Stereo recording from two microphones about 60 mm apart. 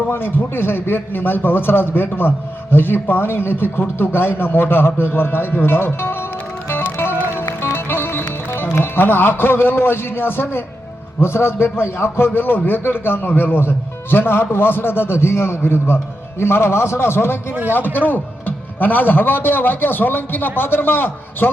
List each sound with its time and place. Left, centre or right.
0.1 s a man's voice: left
6.7 s music: left
11.2 s a man's voice: left